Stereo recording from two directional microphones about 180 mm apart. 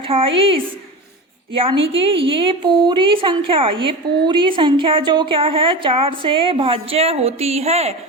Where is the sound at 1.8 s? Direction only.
30° right (ahead or behind).